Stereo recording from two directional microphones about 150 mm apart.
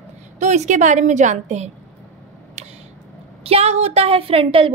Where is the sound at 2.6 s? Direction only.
45° right (ahead or behind).